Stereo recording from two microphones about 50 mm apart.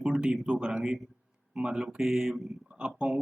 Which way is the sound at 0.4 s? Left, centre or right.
Centre.